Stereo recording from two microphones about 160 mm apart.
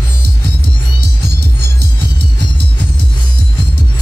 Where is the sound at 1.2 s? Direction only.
90° right.